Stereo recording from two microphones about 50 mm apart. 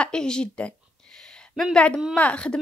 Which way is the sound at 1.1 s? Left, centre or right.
Centre.